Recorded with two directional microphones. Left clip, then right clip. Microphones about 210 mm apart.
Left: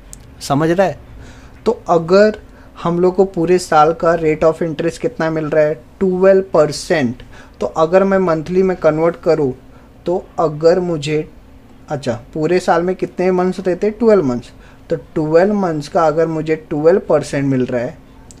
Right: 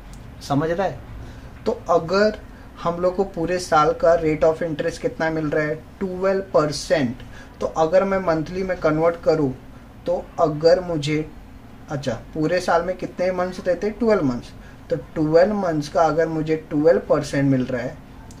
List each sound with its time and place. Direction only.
0.4 s speech: 50° left (ahead or behind)